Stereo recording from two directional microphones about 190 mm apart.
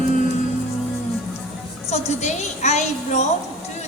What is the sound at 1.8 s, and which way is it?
A woman's voice, 35° left (ahead or behind).